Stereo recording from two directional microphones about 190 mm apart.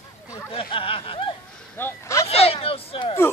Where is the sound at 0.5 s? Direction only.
30° left (ahead or behind).